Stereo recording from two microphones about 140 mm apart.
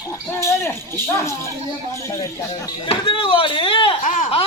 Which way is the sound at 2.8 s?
40° left (ahead or behind).